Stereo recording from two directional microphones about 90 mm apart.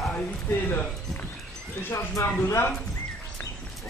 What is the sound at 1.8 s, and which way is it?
Speech, 25° left (ahead or behind).